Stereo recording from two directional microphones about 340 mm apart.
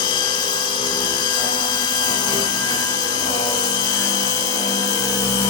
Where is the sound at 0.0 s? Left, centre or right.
Centre.